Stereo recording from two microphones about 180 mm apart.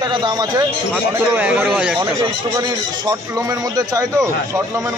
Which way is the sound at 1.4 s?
10° right (ahead or behind).